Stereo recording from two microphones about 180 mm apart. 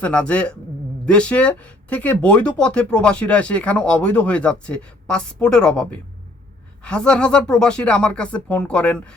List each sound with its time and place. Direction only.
0.0 s speech: 5° left (ahead or behind)